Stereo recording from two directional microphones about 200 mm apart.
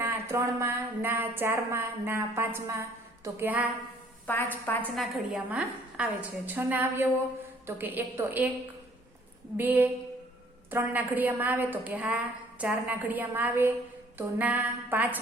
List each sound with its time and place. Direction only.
0.0 s a woman's voice: 15° right (ahead or behind)
4.3 s a woman's voice: 10° left (ahead or behind)
4.8 s a woman's voice: centre (ahead or behind)
9.6 s a woman's voice: 10° right (ahead or behind)